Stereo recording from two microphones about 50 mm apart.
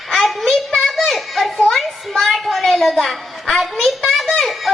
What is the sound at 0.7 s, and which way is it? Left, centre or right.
Children playing, centre.